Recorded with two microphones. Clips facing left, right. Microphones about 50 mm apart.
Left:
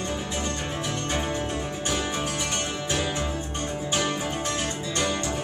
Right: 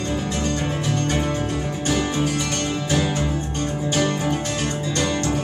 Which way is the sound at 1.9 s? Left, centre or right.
Right.